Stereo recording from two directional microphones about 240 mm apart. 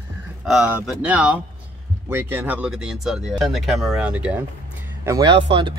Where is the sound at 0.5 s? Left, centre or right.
Centre.